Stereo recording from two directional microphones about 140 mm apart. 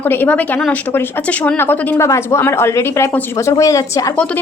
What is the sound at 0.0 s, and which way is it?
A woman's voice, 15° left (ahead or behind).